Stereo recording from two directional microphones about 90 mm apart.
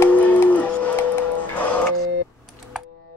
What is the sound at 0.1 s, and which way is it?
Music, 15° left (ahead or behind).